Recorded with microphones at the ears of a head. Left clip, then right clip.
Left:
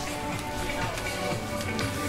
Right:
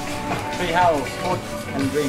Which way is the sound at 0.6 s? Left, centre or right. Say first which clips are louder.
Right 16 dB; right.